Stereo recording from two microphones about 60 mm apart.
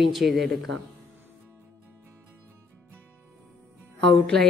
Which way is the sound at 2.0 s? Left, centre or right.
Right.